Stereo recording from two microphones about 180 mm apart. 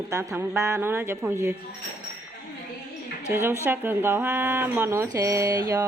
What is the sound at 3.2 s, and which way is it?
Speech, 10° right (ahead or behind).